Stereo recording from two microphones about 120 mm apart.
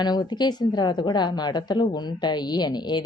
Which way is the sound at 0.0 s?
35° left (ahead or behind).